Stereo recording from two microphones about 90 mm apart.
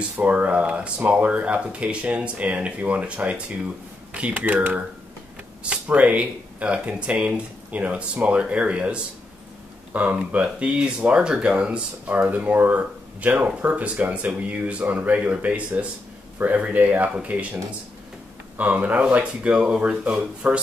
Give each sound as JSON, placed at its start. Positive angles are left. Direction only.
{"t": 0.2, "sound": "speech", "side_deg": -15}
{"t": 18.6, "sound": "speech", "side_deg": -15}